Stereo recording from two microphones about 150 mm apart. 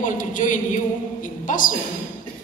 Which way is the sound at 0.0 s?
60° left (ahead or behind).